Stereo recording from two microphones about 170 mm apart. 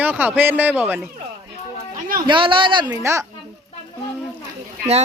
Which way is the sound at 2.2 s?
30° right (ahead or behind).